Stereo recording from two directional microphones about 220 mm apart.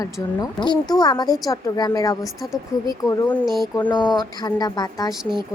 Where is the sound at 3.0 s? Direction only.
15° left (ahead or behind).